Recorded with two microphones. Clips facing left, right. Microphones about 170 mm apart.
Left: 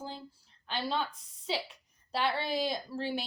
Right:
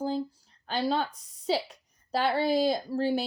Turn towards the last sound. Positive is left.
turn(degrees=-40)  # may be behind; listen again after turning